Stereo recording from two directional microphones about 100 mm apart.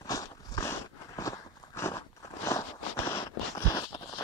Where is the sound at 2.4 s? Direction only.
30° left (ahead or behind).